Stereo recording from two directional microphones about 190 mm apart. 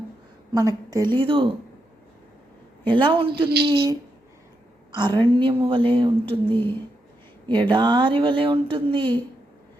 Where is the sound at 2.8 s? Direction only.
25° right (ahead or behind).